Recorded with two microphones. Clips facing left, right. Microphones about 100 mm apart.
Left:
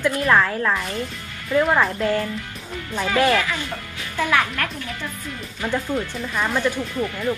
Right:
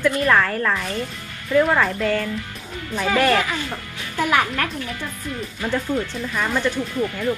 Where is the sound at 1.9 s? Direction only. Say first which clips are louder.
Even; 20° left (ahead or behind).